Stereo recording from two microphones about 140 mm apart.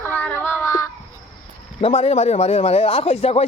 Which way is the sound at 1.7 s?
50° left (ahead or behind).